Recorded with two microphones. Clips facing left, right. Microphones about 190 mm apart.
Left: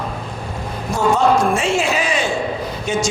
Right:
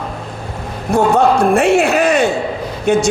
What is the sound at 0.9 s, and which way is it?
A man's voice, 60° right (ahead or behind).